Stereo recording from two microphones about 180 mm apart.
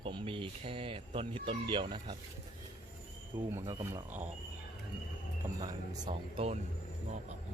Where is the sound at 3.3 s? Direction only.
25° right (ahead or behind).